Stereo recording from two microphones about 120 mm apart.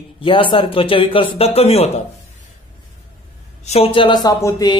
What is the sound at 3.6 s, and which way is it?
A man's voice, 55° left (ahead or behind).